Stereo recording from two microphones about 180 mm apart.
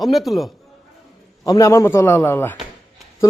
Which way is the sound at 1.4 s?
20° left (ahead or behind).